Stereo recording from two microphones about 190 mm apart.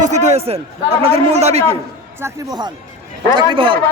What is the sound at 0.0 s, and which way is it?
Speech, 35° right (ahead or behind).